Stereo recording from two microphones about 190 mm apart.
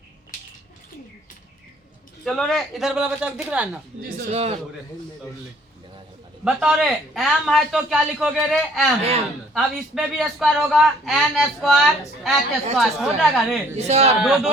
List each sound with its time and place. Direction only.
2.2 s a man's voice: centre (ahead or behind)
4.3 s speech: 35° right (ahead or behind)
6.4 s a man's voice: 5° right (ahead or behind)
13.7 s speech: 35° right (ahead or behind)
14.2 s a man's voice: 5° right (ahead or behind)